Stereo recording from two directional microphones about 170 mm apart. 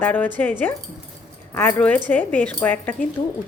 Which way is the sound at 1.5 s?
10° left (ahead or behind).